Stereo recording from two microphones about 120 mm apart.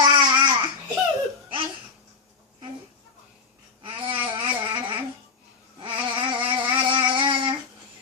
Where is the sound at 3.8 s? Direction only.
45° right (ahead or behind).